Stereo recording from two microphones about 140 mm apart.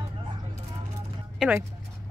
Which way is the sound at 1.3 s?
10° right (ahead or behind).